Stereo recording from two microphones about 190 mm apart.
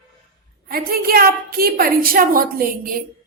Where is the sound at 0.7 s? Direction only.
50° right (ahead or behind).